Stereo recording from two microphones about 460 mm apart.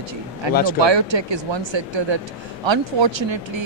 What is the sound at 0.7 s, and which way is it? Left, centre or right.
A man's voice, right.